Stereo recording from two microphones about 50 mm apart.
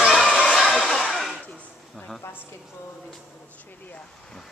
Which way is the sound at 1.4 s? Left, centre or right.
Left.